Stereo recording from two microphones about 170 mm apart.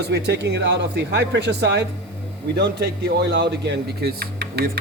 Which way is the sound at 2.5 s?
75° right (ahead or behind).